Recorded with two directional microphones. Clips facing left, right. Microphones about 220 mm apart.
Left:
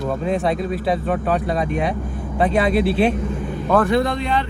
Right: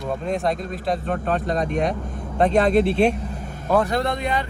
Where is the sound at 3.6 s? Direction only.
45° right (ahead or behind).